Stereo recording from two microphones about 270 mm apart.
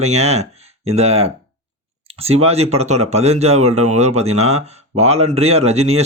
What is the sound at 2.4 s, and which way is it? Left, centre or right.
Speech, right.